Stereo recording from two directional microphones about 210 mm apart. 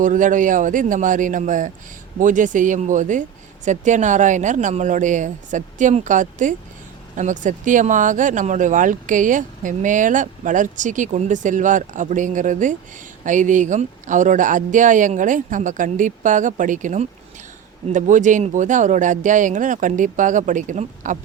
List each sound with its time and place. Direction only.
0.0 s speech: 40° right (ahead or behind)